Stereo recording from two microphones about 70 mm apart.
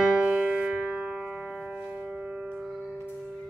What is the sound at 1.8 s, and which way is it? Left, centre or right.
Music, centre.